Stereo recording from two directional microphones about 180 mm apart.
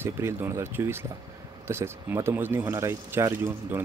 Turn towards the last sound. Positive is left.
turn(degrees=-15)  # may be behind; listen again after turning